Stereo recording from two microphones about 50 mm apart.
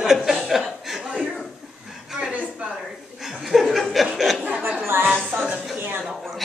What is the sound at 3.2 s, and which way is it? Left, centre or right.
Laughter, centre.